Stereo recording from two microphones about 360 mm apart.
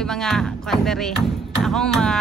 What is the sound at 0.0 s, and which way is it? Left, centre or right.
Speech, centre.